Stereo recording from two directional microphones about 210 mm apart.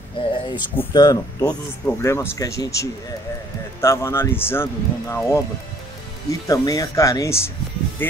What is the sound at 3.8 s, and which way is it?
Speech, 15° left (ahead or behind).